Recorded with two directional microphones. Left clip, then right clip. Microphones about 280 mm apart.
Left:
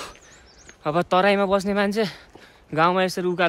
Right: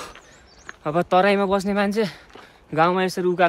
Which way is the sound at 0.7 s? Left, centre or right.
Centre.